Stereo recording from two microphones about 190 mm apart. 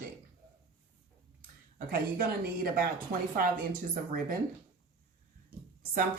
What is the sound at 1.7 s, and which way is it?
A woman's voice, 50° right (ahead or behind).